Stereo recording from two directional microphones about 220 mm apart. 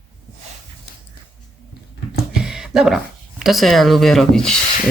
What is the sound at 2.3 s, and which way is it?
Speech, centre (ahead or behind).